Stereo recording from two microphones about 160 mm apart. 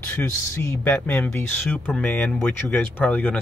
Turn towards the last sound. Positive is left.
turn(degrees=10)  # may be behind; listen again after turning